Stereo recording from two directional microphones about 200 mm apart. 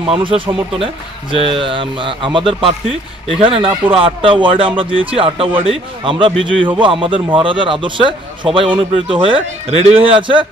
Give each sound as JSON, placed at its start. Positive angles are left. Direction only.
{"t": 0.1, "sound": "a man's voice", "side_deg": -25}